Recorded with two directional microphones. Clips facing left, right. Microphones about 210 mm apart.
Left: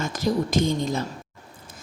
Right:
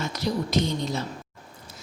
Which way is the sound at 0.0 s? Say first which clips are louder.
Left 3 dB; 50° left (ahead or behind).